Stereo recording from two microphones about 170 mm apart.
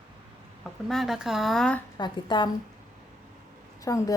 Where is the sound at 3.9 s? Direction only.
20° left (ahead or behind).